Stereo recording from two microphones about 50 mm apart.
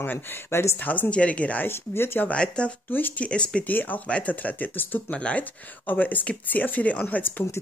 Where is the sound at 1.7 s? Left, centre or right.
Left.